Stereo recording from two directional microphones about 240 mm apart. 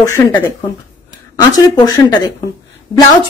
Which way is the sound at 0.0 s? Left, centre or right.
Centre.